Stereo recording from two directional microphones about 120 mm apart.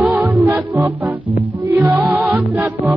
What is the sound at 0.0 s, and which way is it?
Music, 20° right (ahead or behind).